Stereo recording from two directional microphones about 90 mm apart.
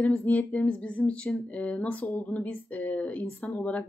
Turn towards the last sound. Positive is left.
turn(degrees=15)  # may be behind; listen again after turning